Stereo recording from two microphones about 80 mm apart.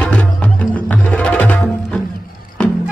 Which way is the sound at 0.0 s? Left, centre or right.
Centre.